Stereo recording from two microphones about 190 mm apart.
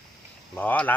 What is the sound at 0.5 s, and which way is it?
Speech, 5° left (ahead or behind).